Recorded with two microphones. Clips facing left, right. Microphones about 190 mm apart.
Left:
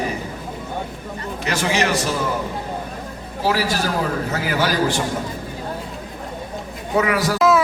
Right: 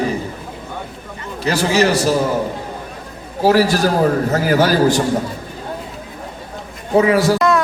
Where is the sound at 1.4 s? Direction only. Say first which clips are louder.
Right 6 dB; 35° right (ahead or behind).